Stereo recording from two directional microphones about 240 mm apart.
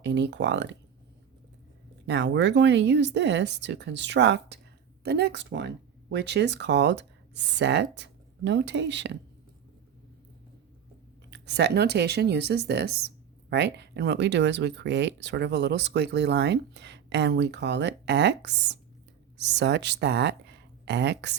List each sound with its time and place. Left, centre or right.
0.0 s speech: right
2.0 s speech: right
11.3 s speech: right